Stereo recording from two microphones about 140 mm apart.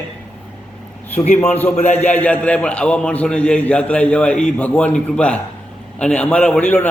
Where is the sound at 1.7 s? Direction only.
50° left (ahead or behind).